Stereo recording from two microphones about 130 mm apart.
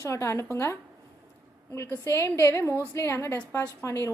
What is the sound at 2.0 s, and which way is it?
A woman's voice, 20° left (ahead or behind).